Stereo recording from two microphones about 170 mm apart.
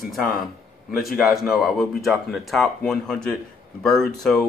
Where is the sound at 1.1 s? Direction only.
Centre (ahead or behind).